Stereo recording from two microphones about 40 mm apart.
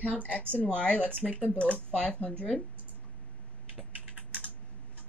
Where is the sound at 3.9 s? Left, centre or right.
Right.